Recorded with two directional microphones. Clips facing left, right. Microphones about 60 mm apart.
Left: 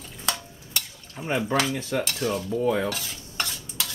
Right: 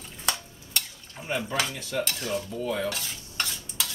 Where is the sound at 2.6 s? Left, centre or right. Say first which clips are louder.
Left 7 dB; left.